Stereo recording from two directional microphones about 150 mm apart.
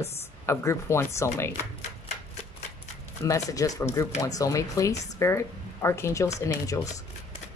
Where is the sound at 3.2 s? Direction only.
20° left (ahead or behind).